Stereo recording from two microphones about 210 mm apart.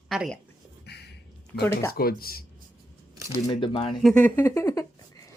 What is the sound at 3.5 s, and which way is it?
Speech, 25° left (ahead or behind).